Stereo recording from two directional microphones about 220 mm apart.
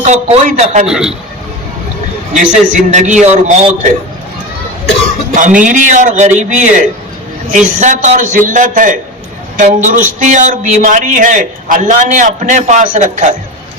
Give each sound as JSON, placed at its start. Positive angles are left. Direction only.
{"t": 0.0, "sound": "a man's voice", "side_deg": -35}
{"t": 0.9, "sound": "a man's voice", "side_deg": -5}
{"t": 2.3, "sound": "a man's voice", "side_deg": -35}
{"t": 5.3, "sound": "a man's voice", "side_deg": -35}